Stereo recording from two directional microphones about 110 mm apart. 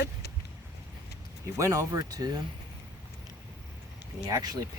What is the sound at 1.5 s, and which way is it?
Speech, 30° right (ahead or behind).